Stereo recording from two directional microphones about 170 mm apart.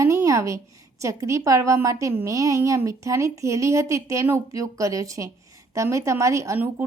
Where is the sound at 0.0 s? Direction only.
20° right (ahead or behind).